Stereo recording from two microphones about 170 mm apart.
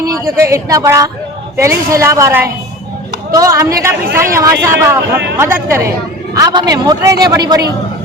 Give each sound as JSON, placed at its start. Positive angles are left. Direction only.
{"t": 0.0, "sound": "a man's voice", "side_deg": -20}